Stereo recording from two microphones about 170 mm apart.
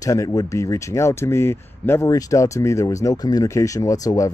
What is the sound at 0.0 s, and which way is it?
Speech, 20° left (ahead or behind).